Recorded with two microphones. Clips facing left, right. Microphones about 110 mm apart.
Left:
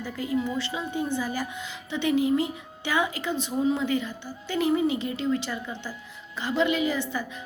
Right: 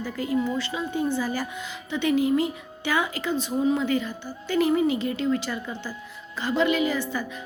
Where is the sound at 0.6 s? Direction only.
20° left (ahead or behind).